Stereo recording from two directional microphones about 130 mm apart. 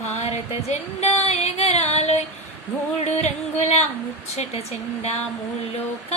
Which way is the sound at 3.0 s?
60° left (ahead or behind).